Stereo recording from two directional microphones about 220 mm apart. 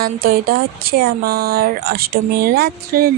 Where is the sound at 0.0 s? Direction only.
45° right (ahead or behind).